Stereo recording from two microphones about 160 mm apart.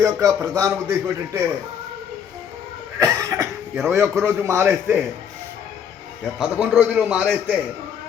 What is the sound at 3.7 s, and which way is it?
A man's voice, 10° right (ahead or behind).